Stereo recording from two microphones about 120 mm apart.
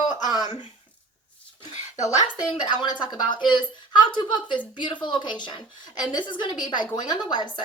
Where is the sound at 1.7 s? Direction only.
75° left (ahead or behind).